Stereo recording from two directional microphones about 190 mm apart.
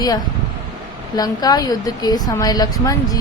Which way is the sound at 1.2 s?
20° left (ahead or behind).